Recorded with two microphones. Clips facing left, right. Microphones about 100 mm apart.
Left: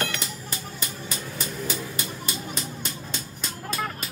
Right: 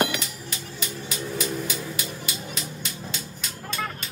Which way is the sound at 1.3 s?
40° left (ahead or behind).